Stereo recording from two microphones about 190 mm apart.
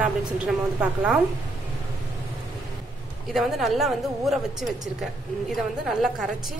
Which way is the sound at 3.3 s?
Centre (ahead or behind).